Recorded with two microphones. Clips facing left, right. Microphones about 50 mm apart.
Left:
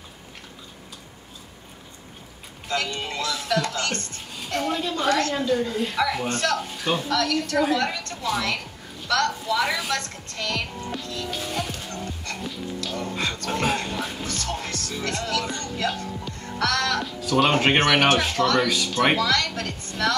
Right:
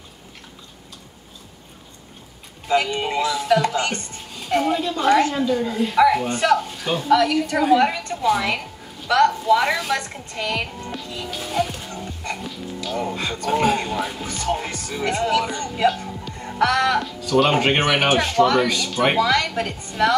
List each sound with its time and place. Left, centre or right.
2.7 s speech: centre
6.7 s music: centre
7.1 s a woman's voice: centre
10.8 s music: centre
12.4 s music: centre
12.8 s speech: centre
14.2 s speech: centre
16.3 s music: centre
17.0 s speech: centre
18.7 s speech: centre
19.1 s speech: centre